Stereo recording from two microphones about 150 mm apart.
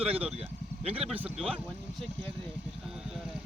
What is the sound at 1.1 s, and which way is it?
Speech, 5° right (ahead or behind).